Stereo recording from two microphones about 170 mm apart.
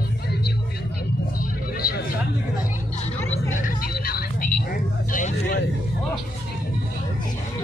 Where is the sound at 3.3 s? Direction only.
50° left (ahead or behind).